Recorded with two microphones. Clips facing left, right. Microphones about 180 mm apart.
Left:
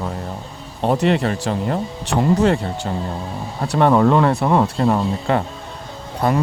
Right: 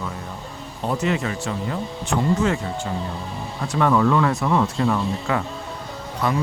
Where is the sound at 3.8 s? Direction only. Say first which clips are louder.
Left 4 dB; 40° left (ahead or behind).